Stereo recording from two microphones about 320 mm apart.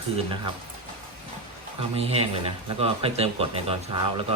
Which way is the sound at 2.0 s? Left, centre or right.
Centre.